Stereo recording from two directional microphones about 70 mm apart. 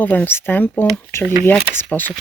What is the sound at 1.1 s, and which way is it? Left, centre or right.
Speech, left.